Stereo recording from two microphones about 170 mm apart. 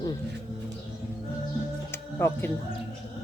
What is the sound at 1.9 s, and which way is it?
Music, 15° left (ahead or behind).